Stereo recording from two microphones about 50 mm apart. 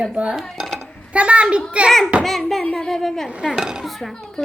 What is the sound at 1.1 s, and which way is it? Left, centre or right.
Speech, right.